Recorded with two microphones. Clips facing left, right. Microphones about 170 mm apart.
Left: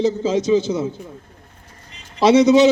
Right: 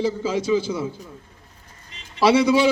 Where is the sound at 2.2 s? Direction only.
25° left (ahead or behind).